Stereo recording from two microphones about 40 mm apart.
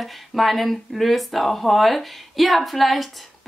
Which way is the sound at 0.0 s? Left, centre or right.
Centre.